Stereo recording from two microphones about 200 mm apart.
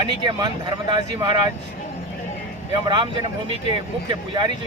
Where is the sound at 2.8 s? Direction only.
25° right (ahead or behind).